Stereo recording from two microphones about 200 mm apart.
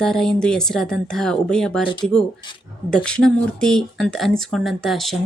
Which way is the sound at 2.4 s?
25° left (ahead or behind).